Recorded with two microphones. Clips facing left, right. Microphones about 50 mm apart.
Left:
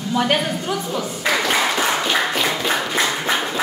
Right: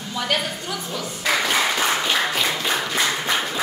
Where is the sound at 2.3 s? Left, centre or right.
Centre.